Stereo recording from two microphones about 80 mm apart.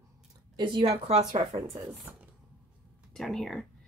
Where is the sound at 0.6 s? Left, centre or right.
Right.